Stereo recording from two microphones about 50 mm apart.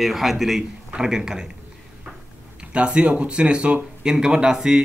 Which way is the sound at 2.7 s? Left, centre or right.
Right.